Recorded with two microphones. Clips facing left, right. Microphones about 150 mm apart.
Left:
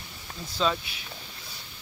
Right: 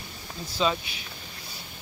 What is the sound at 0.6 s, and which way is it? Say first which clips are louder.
Speech: right 1 dB; 5° right (ahead or behind).